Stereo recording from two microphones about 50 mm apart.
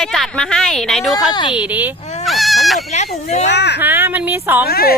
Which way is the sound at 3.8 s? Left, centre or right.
Right.